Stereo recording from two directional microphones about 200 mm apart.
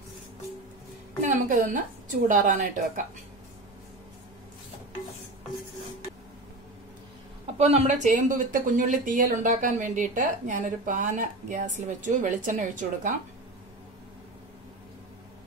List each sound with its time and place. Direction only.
1.2 s a woman's voice: 40° right (ahead or behind)
7.5 s speech: 30° right (ahead or behind)